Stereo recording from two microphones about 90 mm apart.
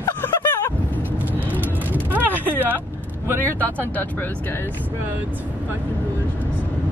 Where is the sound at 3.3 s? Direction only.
25° right (ahead or behind).